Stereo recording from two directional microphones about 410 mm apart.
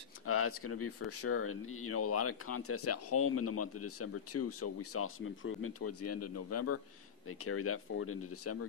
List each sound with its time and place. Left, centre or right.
0.3 s speech: left